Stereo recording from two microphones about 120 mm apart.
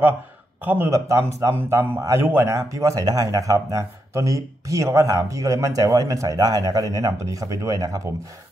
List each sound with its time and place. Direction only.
0.7 s speech: 20° right (ahead or behind)